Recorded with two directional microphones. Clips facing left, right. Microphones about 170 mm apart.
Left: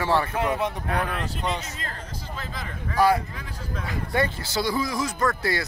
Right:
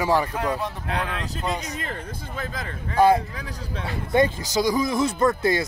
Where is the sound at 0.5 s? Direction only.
20° left (ahead or behind).